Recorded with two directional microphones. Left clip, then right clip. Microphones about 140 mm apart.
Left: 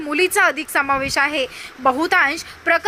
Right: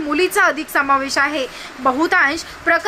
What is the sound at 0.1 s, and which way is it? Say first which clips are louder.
A woman's voice: right 1 dB; 25° left (ahead or behind).